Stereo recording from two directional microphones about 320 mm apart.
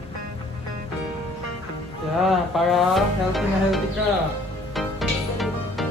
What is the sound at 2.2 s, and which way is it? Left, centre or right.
Music, centre.